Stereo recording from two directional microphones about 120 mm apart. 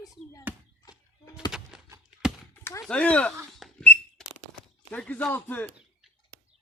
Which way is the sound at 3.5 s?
Centre (ahead or behind).